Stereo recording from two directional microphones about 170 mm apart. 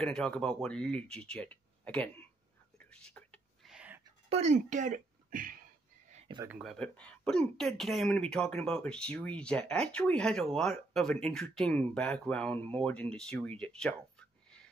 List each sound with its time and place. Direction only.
0.0 s speech: 5° left (ahead or behind)
2.9 s whispering: 5° left (ahead or behind)
3.7 s a sound: 10° right (ahead or behind)
4.3 s speech: 40° right (ahead or behind)
6.1 s a sound: 30° right (ahead or behind)
6.6 s speech: 5° left (ahead or behind)